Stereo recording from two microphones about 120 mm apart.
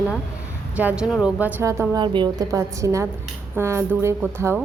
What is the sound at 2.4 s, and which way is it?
A woman's voice, 25° right (ahead or behind).